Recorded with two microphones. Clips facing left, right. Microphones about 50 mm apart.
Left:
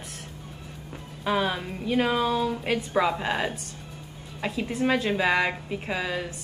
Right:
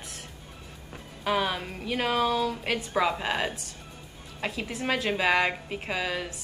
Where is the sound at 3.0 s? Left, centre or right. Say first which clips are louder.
Left 1 dB; centre.